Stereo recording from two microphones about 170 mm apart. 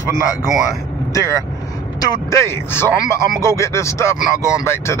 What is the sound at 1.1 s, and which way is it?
Speech, 20° left (ahead or behind).